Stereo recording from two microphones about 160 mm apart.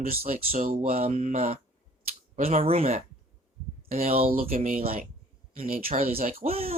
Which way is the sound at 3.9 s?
60° right (ahead or behind).